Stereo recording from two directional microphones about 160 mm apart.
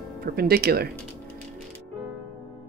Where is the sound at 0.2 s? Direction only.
75° right (ahead or behind).